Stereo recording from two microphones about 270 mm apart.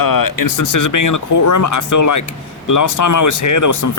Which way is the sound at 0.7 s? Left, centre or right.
Left.